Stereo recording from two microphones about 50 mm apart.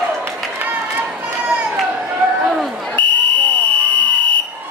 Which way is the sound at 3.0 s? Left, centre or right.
Left.